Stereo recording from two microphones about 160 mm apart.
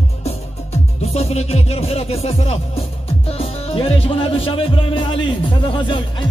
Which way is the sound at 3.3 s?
40° left (ahead or behind).